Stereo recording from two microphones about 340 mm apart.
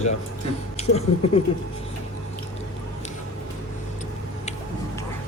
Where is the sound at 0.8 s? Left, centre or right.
Centre.